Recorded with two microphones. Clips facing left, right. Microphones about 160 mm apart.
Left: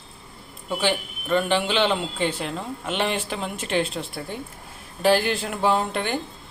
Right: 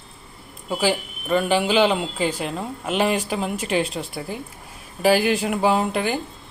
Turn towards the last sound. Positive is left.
turn(degrees=-5)  # may be behind; listen again after turning